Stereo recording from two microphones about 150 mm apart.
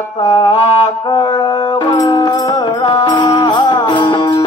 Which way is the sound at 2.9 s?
30° left (ahead or behind).